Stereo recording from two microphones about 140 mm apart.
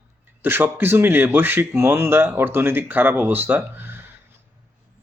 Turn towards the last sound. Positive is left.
turn(degrees=-15)  # may be behind; listen again after turning